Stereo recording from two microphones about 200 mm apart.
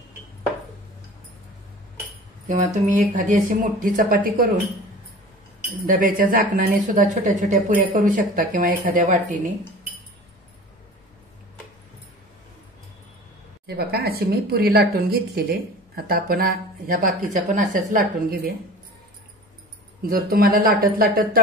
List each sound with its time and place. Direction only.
2.4 s speech: 40° right (ahead or behind)
5.9 s speech: 40° right (ahead or behind)
13.7 s speech: 55° right (ahead or behind)
20.0 s speech: 45° right (ahead or behind)